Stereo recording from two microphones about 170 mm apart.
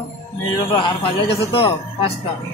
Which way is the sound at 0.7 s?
35° left (ahead or behind).